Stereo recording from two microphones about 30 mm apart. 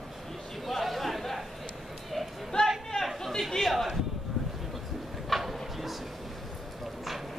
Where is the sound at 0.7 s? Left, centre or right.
Centre.